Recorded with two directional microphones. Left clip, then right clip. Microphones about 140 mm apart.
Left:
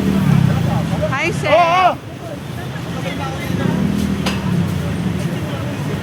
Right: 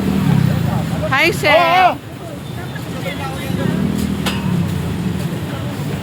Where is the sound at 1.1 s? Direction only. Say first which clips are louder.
Right 5 dB; 85° right.